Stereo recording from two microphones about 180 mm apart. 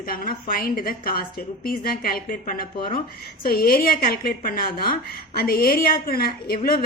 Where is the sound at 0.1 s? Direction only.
55° left (ahead or behind).